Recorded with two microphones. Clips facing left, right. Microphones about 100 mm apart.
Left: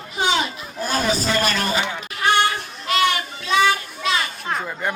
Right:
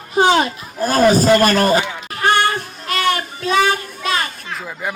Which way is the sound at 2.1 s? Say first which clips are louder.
Right 2 dB; 45° right (ahead or behind).